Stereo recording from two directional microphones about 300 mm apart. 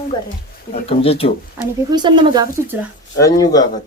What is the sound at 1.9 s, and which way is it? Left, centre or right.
Speech, centre.